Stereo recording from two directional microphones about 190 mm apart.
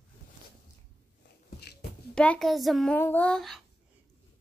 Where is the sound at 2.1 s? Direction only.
5° left (ahead or behind).